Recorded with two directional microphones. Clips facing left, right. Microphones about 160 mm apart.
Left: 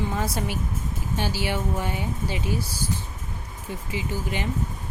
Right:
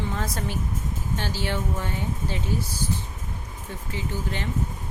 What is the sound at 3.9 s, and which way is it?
Speech, 10° left (ahead or behind).